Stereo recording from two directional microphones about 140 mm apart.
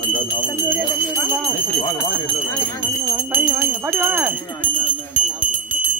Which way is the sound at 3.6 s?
15° right (ahead or behind).